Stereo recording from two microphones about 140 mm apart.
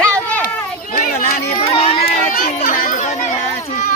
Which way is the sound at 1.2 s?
45° left (ahead or behind).